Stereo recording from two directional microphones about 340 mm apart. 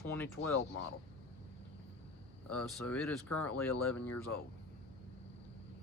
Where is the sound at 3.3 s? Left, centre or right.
Left.